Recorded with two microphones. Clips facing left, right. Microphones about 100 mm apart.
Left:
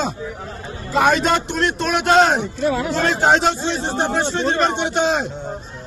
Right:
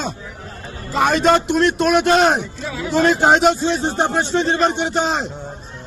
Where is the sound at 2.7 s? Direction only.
60° left (ahead or behind).